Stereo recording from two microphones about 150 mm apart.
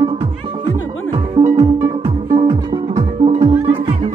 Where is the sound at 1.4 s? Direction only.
40° right (ahead or behind).